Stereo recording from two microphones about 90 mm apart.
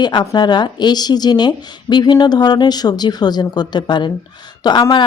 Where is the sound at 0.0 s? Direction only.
55° left (ahead or behind).